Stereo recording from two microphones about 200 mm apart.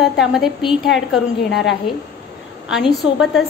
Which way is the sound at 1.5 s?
55° left (ahead or behind).